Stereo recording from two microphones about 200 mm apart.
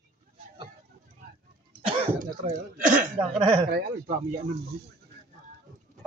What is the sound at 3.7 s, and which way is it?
Speech, 55° right (ahead or behind).